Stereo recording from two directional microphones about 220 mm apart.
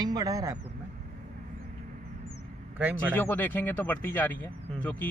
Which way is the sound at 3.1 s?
10° left (ahead or behind).